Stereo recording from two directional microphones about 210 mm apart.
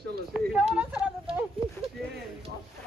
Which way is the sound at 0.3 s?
5° right (ahead or behind).